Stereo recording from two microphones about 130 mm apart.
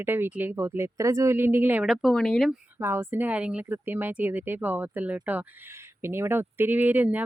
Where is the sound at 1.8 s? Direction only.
5° right (ahead or behind).